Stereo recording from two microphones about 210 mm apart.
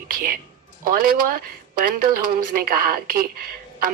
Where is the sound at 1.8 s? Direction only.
45° right (ahead or behind).